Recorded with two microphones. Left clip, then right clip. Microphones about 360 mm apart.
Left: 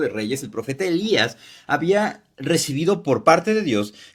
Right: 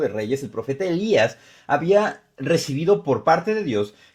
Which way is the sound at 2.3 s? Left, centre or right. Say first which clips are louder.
Even; centre.